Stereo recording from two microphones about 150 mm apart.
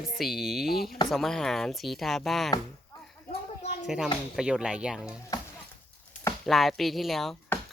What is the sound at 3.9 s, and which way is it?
Speech, 5° right (ahead or behind).